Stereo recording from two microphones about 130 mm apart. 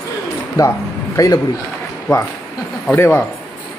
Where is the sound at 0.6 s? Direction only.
25° left (ahead or behind).